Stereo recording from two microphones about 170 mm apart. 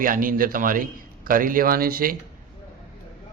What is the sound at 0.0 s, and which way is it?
A man's voice, 55° right (ahead or behind).